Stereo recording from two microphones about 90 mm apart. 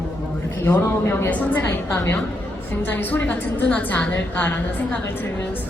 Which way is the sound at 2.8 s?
20° left (ahead or behind).